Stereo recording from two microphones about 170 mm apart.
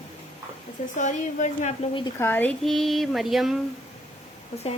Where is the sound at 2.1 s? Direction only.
15° left (ahead or behind).